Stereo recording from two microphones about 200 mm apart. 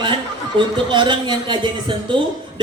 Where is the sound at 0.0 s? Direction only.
25° right (ahead or behind).